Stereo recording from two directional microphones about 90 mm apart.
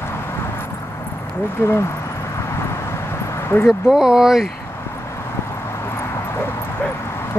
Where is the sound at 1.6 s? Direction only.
30° left (ahead or behind).